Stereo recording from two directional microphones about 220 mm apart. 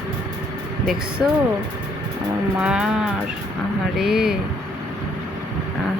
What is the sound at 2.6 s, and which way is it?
Speech, 5° right (ahead or behind).